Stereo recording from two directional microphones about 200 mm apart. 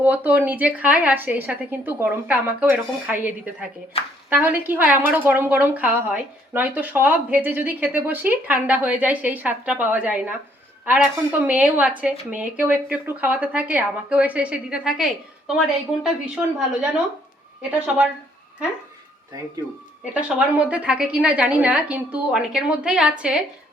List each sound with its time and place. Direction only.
0.0 s a woman's voice: 10° right (ahead or behind)
17.6 s a woman's voice: 10° right (ahead or behind)
20.1 s a woman's voice: 5° right (ahead or behind)